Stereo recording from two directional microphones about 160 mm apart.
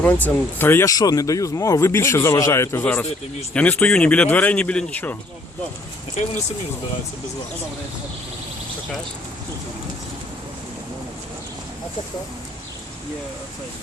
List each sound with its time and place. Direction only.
0.0 s speech: 10° left (ahead or behind)